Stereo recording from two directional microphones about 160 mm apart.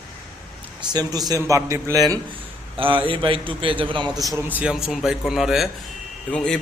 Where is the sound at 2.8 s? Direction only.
35° right (ahead or behind).